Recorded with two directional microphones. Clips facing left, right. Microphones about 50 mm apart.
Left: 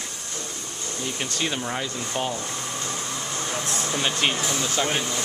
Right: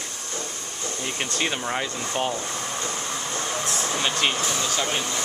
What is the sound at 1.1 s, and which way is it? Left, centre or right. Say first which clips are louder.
Speech: right 1 dB; centre.